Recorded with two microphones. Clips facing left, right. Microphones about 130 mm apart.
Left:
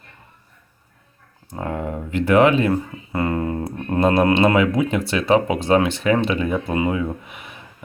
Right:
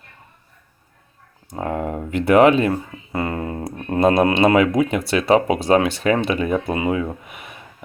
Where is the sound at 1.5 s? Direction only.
20° right (ahead or behind).